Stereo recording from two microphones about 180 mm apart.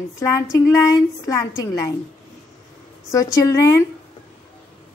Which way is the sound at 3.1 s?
20° left (ahead or behind).